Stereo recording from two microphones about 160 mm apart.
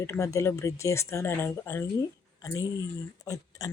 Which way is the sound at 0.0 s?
20° left (ahead or behind).